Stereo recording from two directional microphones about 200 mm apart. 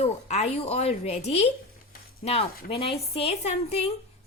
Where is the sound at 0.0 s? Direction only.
35° left (ahead or behind).